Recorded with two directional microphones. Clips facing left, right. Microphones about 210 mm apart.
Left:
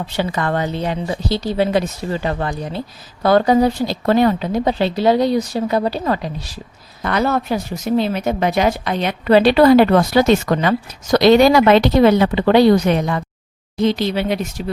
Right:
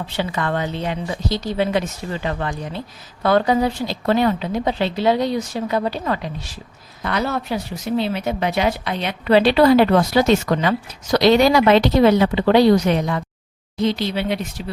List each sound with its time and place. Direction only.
0.2 s a woman's voice: 40° left (ahead or behind)
7.0 s speech: 50° left (ahead or behind)